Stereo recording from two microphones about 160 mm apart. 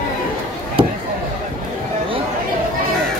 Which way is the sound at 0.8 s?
30° right (ahead or behind).